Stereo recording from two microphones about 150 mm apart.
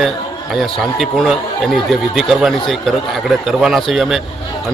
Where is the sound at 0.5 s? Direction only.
Centre (ahead or behind).